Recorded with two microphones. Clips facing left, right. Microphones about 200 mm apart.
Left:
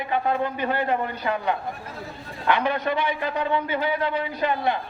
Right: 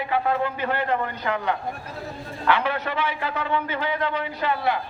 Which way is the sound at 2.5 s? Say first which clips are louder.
Left 1 dB; 15° left (ahead or behind).